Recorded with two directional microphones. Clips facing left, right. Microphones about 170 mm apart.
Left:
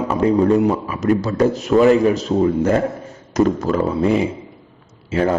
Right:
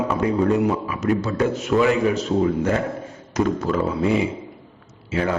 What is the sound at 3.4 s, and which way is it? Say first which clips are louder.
Mantra: left 4 dB; 40° left (ahead or behind).